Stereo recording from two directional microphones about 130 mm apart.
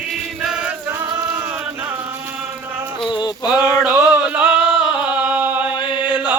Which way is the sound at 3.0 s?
35° left (ahead or behind).